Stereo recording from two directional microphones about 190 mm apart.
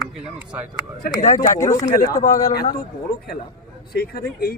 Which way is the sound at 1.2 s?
40° left (ahead or behind).